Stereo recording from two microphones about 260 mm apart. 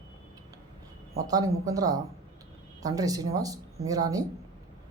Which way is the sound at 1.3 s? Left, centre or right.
Centre.